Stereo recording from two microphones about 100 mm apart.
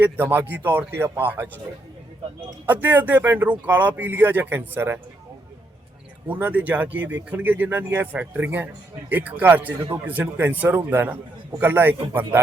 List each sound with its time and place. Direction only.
0.0 s a man's voice: 20° right (ahead or behind)
2.6 s speech: 15° right (ahead or behind)
6.2 s a man's voice: 15° right (ahead or behind)